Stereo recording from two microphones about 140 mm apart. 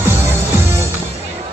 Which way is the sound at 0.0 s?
15° right (ahead or behind).